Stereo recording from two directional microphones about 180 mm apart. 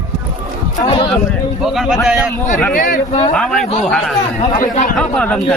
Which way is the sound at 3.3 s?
5° left (ahead or behind).